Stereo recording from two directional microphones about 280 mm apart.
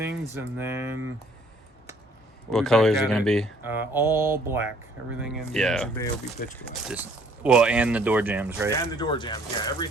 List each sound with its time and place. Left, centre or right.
0.3 s speech: centre
2.5 s speech: centre
6.4 s speech: left
6.8 s speech: centre
8.7 s speech: centre